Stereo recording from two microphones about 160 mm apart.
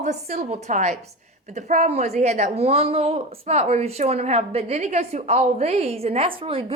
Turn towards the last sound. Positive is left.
turn(degrees=-35)  # may be behind; listen again after turning